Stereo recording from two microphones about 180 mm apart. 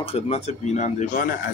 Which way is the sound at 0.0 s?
35° left (ahead or behind).